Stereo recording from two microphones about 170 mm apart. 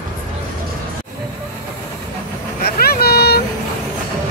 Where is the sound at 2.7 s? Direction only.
65° left (ahead or behind).